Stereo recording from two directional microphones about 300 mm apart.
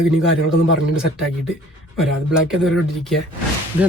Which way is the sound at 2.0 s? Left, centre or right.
Centre.